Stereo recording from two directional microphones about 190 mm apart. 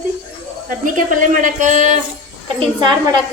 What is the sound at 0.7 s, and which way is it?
A woman's voice, 45° right (ahead or behind).